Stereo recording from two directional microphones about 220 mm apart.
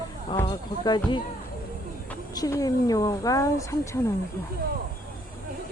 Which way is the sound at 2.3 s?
15° left (ahead or behind).